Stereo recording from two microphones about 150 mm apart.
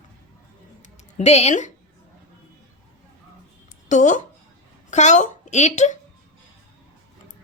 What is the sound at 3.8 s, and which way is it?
A woman's voice, 55° left (ahead or behind).